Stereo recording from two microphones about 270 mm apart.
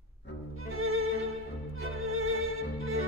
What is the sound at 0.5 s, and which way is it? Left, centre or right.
Music, right.